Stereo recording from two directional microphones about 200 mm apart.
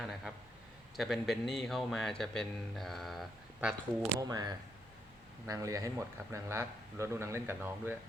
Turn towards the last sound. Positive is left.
turn(degrees=-10)  # may be behind; listen again after turning